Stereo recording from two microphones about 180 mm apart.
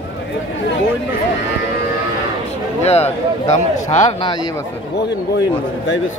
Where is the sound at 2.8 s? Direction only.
35° left (ahead or behind).